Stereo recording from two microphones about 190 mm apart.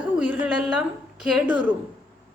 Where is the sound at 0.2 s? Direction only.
5° right (ahead or behind).